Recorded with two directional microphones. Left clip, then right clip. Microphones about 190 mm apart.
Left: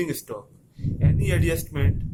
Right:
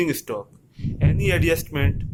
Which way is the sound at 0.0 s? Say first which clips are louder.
Right 5 dB; 30° right (ahead or behind).